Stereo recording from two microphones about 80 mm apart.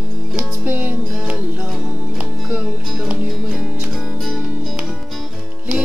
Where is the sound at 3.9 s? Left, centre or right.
Centre.